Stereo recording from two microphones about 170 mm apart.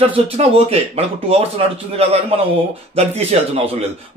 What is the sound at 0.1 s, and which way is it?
A man's voice, 40° right (ahead or behind).